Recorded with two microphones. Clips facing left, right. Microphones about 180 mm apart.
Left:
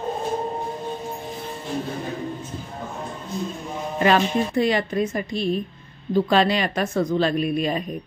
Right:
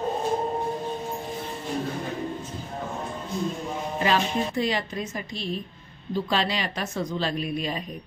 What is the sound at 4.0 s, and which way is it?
Speech, 60° left (ahead or behind).